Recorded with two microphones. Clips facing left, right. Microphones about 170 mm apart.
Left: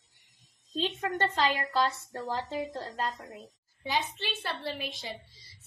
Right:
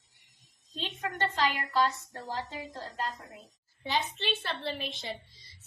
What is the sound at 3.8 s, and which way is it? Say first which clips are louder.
A woman's voice: even; 10° left (ahead or behind).